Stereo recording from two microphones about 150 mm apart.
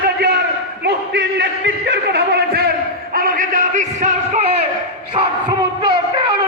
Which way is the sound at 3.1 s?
70° right (ahead or behind).